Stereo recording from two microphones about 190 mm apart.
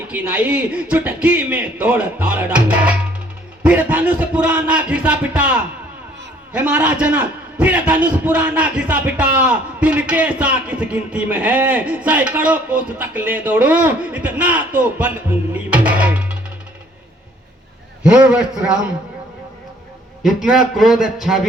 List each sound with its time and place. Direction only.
0.1 s a man's voice: 10° right (ahead or behind)
6.5 s a man's voice: 5° right (ahead or behind)
18.0 s a man's voice: 5° right (ahead or behind)
20.2 s a man's voice: centre (ahead or behind)